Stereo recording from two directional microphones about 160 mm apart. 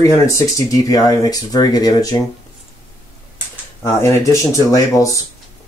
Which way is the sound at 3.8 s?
15° left (ahead or behind).